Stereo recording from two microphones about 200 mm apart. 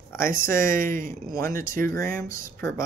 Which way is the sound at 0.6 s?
15° left (ahead or behind).